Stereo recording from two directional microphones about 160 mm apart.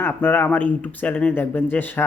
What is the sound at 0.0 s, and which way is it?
Speech, 10° left (ahead or behind).